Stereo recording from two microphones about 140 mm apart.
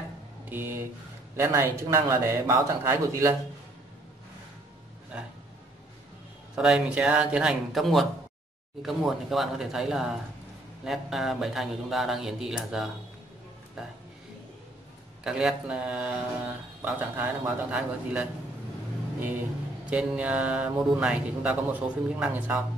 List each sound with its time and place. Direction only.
0.5 s a man's voice: 15° right (ahead or behind)
6.5 s speech: 5° right (ahead or behind)
15.2 s speech: 5° right (ahead or behind)
19.9 s speech: 10° right (ahead or behind)